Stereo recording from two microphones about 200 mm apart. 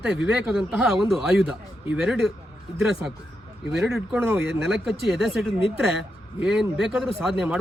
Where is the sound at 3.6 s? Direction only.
Centre (ahead or behind).